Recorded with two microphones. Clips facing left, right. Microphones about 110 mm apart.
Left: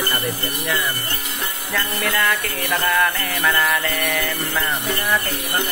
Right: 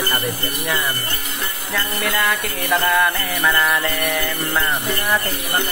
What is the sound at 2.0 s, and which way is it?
Music, 15° right (ahead or behind).